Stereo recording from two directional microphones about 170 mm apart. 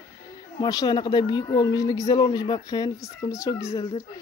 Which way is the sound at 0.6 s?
25° left (ahead or behind).